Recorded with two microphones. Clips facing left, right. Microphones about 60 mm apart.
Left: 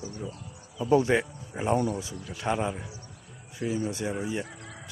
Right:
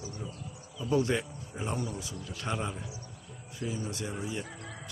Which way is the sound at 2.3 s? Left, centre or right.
Centre.